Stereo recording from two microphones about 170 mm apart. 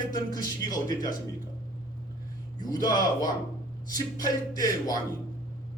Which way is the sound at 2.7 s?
25° left (ahead or behind).